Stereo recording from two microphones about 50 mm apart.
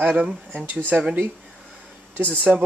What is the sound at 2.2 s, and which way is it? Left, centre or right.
Speech, left.